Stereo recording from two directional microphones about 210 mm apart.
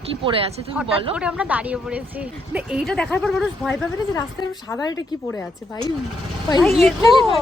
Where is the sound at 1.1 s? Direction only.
5° right (ahead or behind).